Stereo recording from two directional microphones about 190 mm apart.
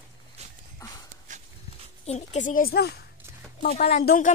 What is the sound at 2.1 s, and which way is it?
Speech, 40° left (ahead or behind).